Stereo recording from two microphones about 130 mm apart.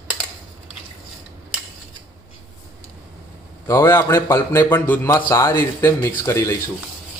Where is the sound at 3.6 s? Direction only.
20° left (ahead or behind).